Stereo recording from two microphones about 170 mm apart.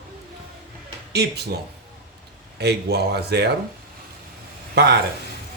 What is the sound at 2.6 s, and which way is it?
Speech, 75° right (ahead or behind).